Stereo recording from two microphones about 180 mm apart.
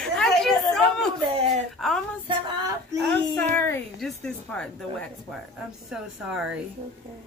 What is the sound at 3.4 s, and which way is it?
A woman's voice, 10° left (ahead or behind).